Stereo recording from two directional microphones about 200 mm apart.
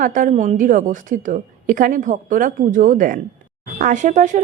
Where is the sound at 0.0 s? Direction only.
40° right (ahead or behind).